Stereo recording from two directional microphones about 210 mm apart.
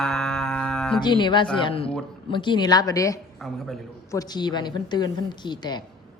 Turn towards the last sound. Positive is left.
turn(degrees=20)  # may be behind; listen again after turning